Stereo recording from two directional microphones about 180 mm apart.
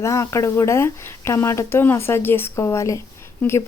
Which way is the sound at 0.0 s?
15° left (ahead or behind).